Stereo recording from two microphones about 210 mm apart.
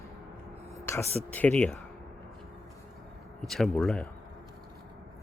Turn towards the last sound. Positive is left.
turn(degrees=5)  # may be behind; listen again after turning